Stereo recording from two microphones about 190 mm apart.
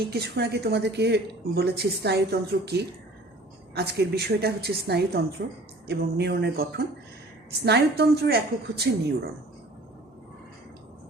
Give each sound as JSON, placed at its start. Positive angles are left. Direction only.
{"t": 0.1, "sound": "a woman's voice", "side_deg": -60}